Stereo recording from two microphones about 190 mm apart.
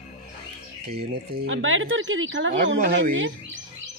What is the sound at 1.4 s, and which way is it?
Speech, 90° right.